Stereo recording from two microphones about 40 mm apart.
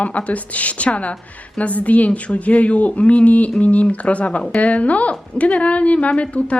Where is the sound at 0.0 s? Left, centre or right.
Left.